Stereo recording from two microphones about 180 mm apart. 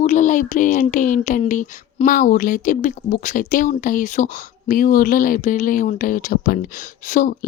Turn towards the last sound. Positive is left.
turn(degrees=50)  # may be behind; listen again after turning